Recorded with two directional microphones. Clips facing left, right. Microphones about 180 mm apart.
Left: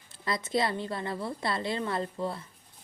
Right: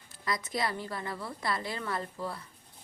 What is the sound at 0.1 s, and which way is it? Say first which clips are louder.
A woman's voice: left 4 dB; 25° left (ahead or behind).